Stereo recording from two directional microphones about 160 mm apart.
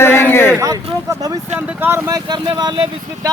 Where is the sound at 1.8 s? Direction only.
15° right (ahead or behind).